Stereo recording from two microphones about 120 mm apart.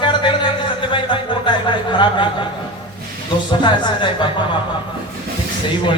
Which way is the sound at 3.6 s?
40° left (ahead or behind).